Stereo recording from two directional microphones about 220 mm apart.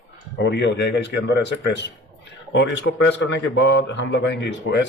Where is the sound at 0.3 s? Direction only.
55° left (ahead or behind).